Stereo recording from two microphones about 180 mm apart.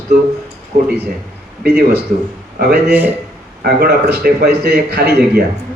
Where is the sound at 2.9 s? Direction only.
10° right (ahead or behind).